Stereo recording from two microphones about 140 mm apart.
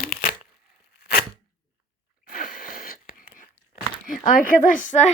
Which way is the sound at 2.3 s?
90° left.